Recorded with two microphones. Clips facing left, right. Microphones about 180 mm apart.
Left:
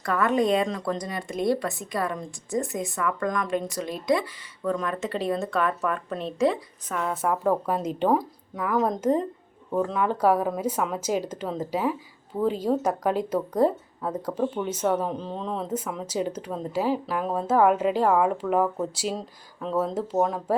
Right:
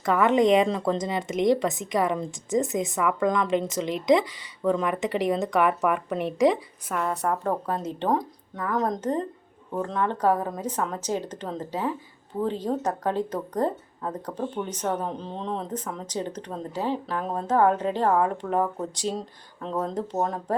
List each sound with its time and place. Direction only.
0.0 s speech: 20° right (ahead or behind)
6.9 s speech: centre (ahead or behind)